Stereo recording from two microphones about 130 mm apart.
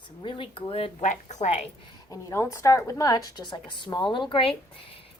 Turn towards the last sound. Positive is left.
turn(degrees=45)  # may be behind; listen again after turning